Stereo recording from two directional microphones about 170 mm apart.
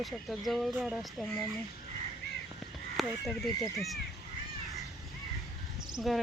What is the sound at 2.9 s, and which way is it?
Speech, centre (ahead or behind).